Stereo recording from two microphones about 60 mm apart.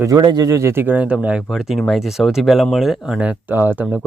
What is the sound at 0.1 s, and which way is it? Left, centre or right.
Speech, right.